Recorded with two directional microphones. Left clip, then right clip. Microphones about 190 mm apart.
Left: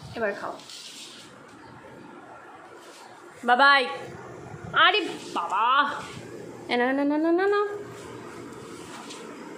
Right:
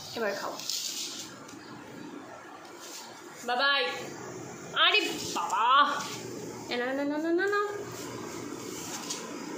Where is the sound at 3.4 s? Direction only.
35° left (ahead or behind).